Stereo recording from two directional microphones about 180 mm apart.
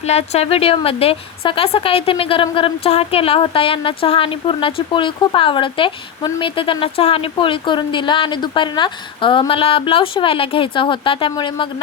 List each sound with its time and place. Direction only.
0.0 s a woman's voice: 35° left (ahead or behind)